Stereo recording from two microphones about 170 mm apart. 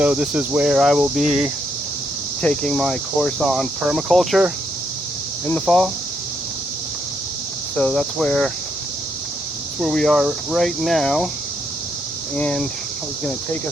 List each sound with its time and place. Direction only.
0.0 s speech: 5° right (ahead or behind)
7.8 s speech: 5° left (ahead or behind)
9.8 s speech: centre (ahead or behind)
12.4 s speech: 5° left (ahead or behind)